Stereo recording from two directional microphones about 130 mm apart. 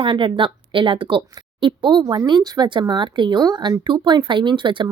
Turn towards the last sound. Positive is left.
turn(degrees=-35)  # may be behind; listen again after turning